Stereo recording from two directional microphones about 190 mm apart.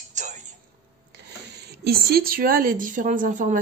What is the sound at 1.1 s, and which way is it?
Speech, 60° right (ahead or behind).